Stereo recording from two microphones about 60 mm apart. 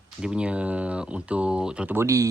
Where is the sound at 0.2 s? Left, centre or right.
Centre.